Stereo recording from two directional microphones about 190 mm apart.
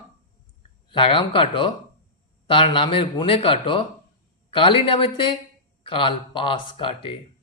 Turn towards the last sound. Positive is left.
turn(degrees=25)  # may be behind; listen again after turning